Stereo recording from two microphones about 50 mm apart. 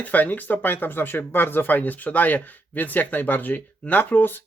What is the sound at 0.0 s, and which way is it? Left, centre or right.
Speech, left.